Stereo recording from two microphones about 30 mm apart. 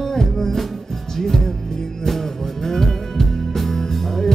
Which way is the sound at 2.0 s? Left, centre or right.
Centre.